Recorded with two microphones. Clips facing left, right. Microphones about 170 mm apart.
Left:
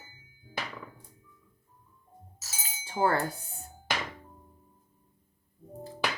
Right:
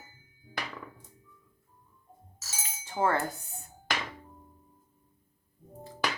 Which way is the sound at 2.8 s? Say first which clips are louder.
Left 1 dB; 35° left (ahead or behind).